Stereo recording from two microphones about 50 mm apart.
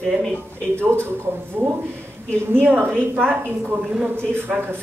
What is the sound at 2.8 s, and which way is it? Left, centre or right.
Speech, right.